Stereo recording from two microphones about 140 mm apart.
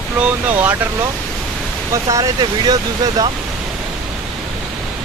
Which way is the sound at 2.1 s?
30° right (ahead or behind).